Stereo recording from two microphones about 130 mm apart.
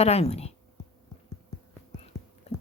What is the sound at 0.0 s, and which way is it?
Speech, 55° left (ahead or behind).